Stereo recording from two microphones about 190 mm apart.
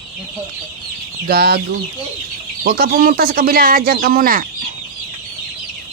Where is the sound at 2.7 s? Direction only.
50° right (ahead or behind).